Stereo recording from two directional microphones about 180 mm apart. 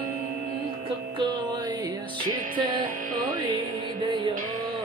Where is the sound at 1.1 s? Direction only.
25° right (ahead or behind).